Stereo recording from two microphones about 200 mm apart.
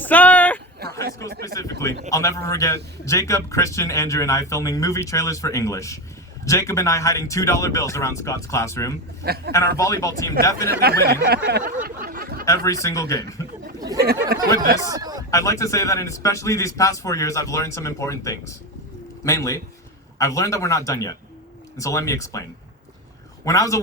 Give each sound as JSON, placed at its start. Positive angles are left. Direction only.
{"t": 0.0, "sound": "a sound", "side_deg": 10}
{"t": 0.8, "sound": "a sound", "side_deg": -50}
{"t": 1.3, "sound": "speech", "side_deg": -50}
{"t": 2.0, "sound": "a man's voice", "side_deg": 15}
{"t": 9.2, "sound": "speech", "side_deg": -50}
{"t": 9.5, "sound": "a man's voice", "side_deg": 15}
{"t": 10.7, "sound": "speech", "side_deg": -50}
{"t": 11.4, "sound": "a sound", "side_deg": -55}
{"t": 12.0, "sound": "chatter", "side_deg": -50}
{"t": 12.5, "sound": "a man's voice", "side_deg": 15}
{"t": 14.0, "sound": "speech", "side_deg": -50}
{"t": 14.8, "sound": "speech", "side_deg": -20}
{"t": 15.3, "sound": "a man's voice", "side_deg": 15}
{"t": 23.5, "sound": "a man's voice", "side_deg": 15}